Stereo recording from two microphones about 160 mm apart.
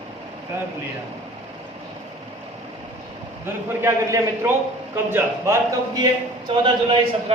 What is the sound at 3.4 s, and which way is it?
A man's voice, 15° right (ahead or behind).